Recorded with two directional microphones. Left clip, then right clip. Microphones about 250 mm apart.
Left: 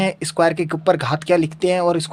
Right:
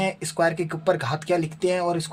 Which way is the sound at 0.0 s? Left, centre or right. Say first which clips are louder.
Left 5 dB; left.